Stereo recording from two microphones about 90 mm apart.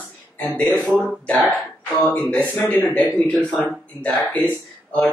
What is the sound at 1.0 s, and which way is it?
Speech, 10° left (ahead or behind).